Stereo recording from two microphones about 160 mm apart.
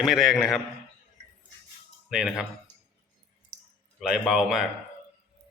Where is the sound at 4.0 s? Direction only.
Centre (ahead or behind).